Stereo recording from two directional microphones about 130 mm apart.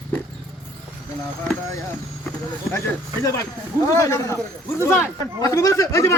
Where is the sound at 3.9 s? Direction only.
25° left (ahead or behind).